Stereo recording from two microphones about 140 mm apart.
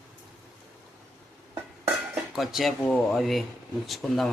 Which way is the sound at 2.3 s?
Centre (ahead or behind).